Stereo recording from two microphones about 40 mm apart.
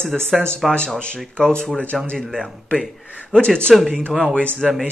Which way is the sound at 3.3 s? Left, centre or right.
Left.